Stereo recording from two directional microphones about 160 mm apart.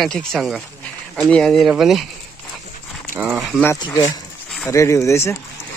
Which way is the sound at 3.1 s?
10° right (ahead or behind).